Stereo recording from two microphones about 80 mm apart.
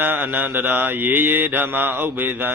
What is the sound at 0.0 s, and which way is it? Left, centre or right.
Mantra, right.